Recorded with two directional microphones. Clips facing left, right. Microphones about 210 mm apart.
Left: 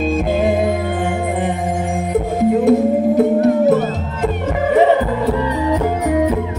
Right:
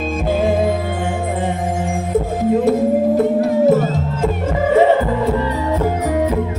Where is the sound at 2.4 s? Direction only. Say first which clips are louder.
Left 3 dB; 20° left (ahead or behind).